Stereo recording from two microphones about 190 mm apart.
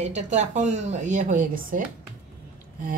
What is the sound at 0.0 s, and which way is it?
Speech, 40° right (ahead or behind).